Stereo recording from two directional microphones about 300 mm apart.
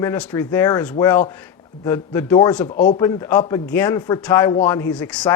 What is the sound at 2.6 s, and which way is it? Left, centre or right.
Speech, left.